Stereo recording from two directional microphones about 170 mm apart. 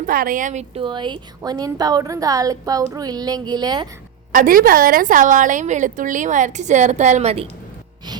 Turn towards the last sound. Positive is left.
turn(degrees=-40)  # may be behind; listen again after turning